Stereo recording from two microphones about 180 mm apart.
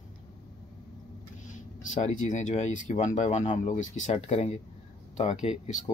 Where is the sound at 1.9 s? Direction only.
40° left (ahead or behind).